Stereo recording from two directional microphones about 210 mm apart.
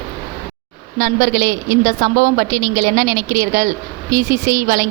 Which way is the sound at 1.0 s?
40° right (ahead or behind).